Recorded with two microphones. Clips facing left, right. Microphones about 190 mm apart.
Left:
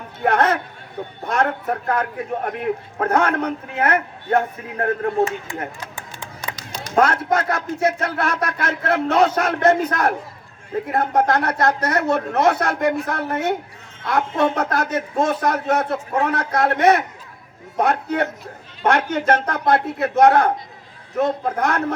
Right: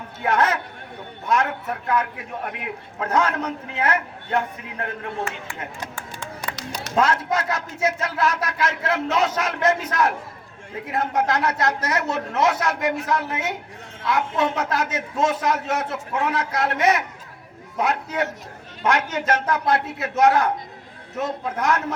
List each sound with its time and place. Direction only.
0.3 s a man's voice: 55° left (ahead or behind)
6.0 s music: 15° left (ahead or behind)
6.9 s speech: 55° left (ahead or behind)
11.2 s speech: 55° left (ahead or behind)